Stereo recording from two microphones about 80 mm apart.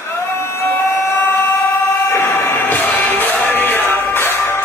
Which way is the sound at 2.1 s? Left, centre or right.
Left.